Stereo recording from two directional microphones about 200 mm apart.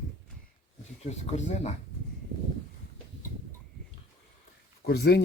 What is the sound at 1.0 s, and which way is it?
Speech, 35° left (ahead or behind).